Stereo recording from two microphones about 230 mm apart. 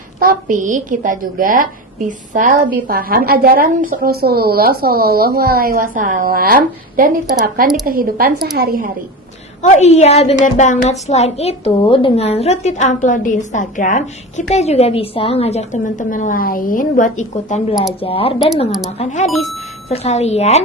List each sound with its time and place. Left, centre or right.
0.2 s a woman's voice: right
9.6 s a woman's voice: left
19.3 s speech: centre
19.9 s a woman's voice: left